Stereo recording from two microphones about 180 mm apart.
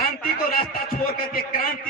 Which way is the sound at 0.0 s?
55° left (ahead or behind).